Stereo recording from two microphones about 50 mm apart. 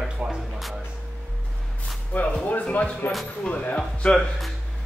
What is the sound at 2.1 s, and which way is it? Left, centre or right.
Speech, left.